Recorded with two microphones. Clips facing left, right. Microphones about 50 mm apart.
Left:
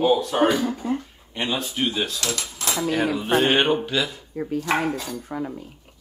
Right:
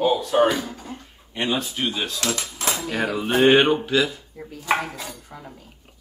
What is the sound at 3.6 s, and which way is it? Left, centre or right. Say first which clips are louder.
Speech: right 2 dB; centre.